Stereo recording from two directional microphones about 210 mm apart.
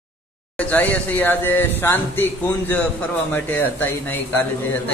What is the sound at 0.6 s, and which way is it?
Speech, 5° left (ahead or behind).